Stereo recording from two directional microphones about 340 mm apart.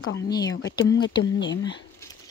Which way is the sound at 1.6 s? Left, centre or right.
Centre.